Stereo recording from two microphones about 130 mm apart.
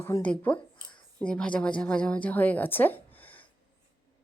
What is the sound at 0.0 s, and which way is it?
A woman's voice, 15° left (ahead or behind).